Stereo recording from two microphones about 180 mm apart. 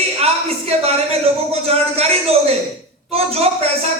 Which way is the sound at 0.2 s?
35° right (ahead or behind).